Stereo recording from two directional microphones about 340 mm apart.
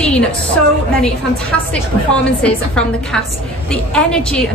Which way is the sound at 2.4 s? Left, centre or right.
Centre.